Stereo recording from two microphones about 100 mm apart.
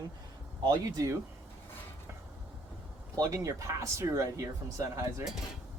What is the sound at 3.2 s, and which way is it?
Speech, 35° right (ahead or behind).